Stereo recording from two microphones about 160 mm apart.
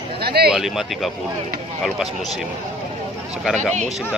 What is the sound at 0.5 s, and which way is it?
Speech, centre (ahead or behind).